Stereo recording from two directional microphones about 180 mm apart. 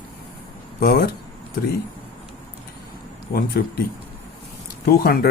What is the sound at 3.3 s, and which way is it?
Speech, 55° left (ahead or behind).